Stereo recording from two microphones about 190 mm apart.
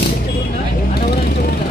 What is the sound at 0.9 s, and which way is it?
Vehicle, 55° left (ahead or behind).